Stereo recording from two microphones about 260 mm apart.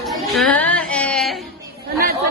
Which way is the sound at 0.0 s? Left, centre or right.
Centre.